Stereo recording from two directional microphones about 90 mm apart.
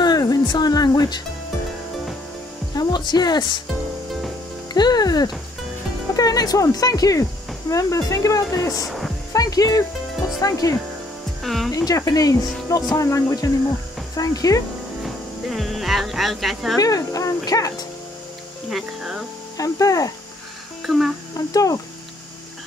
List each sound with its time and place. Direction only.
0.0 s music: 45° left (ahead or behind)
2.7 s speech: 50° left (ahead or behind)
4.7 s speech: 50° left (ahead or behind)
8.8 s music: centre (ahead or behind)
9.3 s music: 40° left (ahead or behind)
10.4 s speech: 40° left (ahead or behind)
11.4 s speech: centre (ahead or behind)
11.7 s speech: 40° left (ahead or behind)
15.5 s speech: centre (ahead or behind)
16.8 s speech: 40° left (ahead or behind)
18.7 s speech: 5° right (ahead or behind)
19.5 s speech: 40° left (ahead or behind)
20.8 s speech: centre (ahead or behind)
21.4 s speech: 40° left (ahead or behind)